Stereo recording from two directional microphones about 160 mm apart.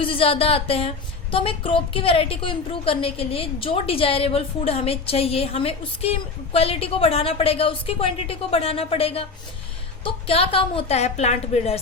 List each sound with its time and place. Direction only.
0.0 s a woman's voice: 35° left (ahead or behind)